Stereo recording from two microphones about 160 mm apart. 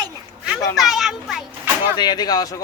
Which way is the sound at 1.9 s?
25° left (ahead or behind).